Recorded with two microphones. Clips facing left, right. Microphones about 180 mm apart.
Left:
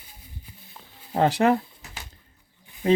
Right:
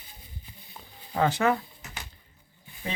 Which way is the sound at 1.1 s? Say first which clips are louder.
Left 4 dB; 35° left (ahead or behind).